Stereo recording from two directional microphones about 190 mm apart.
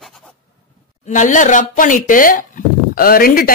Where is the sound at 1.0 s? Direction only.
40° left (ahead or behind).